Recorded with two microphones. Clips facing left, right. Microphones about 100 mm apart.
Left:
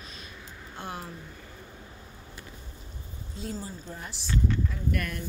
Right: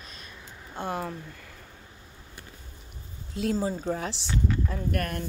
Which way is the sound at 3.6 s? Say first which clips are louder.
Right 11 dB; 90° right.